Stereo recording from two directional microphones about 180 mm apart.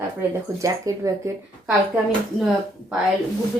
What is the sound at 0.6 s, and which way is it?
Speech, 20° right (ahead or behind).